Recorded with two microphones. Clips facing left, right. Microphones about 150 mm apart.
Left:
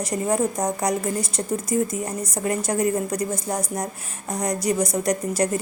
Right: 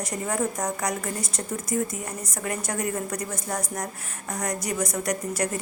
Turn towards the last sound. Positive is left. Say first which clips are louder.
# left 5 dB
turn(degrees=30)  # may be behind; listen again after turning